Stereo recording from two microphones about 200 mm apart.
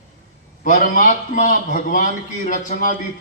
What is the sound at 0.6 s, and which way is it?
A man's voice, 40° left (ahead or behind).